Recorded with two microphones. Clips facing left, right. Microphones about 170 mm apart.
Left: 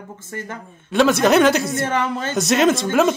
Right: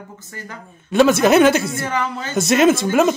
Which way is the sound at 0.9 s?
5° right (ahead or behind).